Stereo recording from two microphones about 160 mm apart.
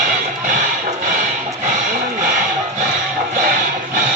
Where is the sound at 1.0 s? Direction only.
55° right (ahead or behind).